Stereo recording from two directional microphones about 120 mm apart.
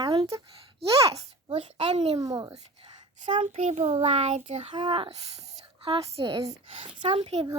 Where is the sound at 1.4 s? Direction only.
50° right (ahead or behind).